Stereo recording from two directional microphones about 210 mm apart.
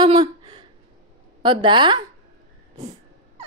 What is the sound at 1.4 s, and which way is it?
Speech, 25° right (ahead or behind).